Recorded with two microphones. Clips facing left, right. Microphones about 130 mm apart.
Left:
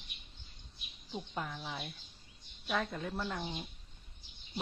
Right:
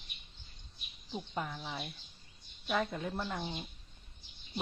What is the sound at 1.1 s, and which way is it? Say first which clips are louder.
Speech: right 1 dB; 5° left (ahead or behind).